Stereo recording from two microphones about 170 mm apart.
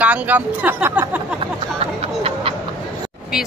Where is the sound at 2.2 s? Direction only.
35° right (ahead or behind).